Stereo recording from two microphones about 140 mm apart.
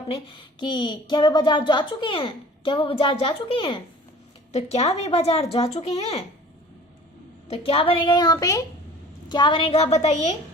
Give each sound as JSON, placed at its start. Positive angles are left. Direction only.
{"t": 0.1, "sound": "speech", "side_deg": 35}
{"t": 4.5, "sound": "speech", "side_deg": 50}
{"t": 7.5, "sound": "speech", "side_deg": 40}